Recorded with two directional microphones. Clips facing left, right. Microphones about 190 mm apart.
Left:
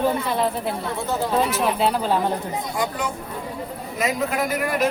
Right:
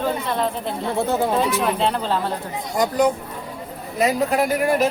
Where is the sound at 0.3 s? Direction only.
5° left (ahead or behind).